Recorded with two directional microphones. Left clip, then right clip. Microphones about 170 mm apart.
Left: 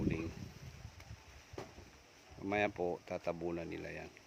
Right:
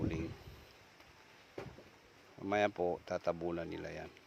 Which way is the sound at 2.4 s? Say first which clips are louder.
Right 2 dB; centre (ahead or behind).